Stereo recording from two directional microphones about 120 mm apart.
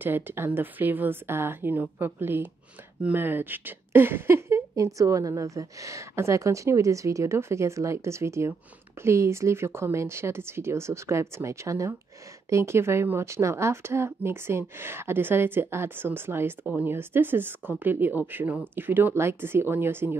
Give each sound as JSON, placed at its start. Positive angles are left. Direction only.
{"t": 0.0, "sound": "speech", "side_deg": -20}